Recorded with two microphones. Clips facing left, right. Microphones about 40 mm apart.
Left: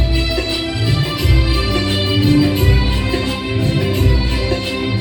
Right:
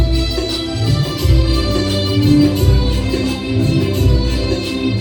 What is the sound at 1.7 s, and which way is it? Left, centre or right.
Music, left.